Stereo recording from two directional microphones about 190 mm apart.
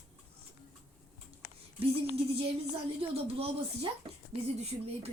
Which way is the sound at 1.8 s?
30° right (ahead or behind).